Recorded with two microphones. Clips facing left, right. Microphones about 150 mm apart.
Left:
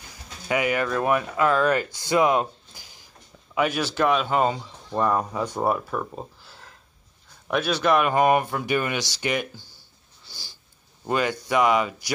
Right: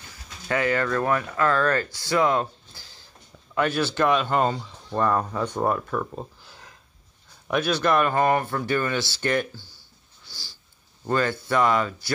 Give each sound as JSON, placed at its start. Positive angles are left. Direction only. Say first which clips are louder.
{"t": 0.1, "sound": "speech", "louder": "left 1 dB", "side_deg": 15}
{"t": 11.1, "sound": "speech", "louder": "even", "side_deg": 15}